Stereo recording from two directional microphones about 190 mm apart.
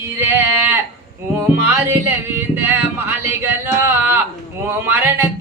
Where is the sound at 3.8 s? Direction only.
10° right (ahead or behind).